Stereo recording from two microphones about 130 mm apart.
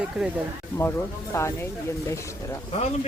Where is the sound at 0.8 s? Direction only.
20° left (ahead or behind).